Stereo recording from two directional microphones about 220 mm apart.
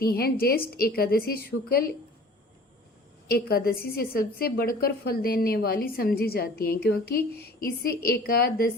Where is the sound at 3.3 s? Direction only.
45° left (ahead or behind).